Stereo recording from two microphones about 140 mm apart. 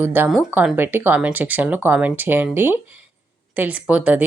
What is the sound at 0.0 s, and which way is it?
Speech, 15° right (ahead or behind).